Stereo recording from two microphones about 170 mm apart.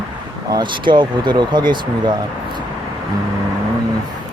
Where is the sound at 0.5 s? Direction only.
25° right (ahead or behind).